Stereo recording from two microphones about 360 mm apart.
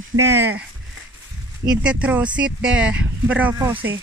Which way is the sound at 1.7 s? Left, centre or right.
Centre.